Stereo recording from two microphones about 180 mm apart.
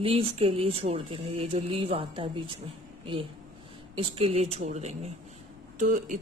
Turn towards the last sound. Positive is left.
turn(degrees=-45)  # may be behind; listen again after turning